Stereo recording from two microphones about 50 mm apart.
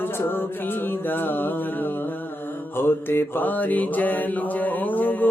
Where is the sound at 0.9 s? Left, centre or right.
Left.